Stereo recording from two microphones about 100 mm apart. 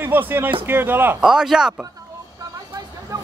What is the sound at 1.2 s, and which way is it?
Speech, 5° right (ahead or behind).